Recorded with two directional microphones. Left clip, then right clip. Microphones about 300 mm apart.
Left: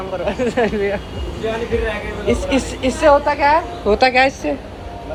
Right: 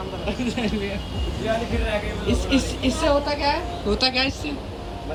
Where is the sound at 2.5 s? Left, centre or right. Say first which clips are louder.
Left 4 dB; centre.